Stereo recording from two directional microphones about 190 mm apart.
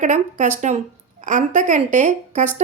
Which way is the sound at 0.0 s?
40° right (ahead or behind).